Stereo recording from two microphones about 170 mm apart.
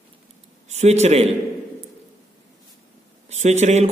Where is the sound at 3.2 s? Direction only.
40° right (ahead or behind).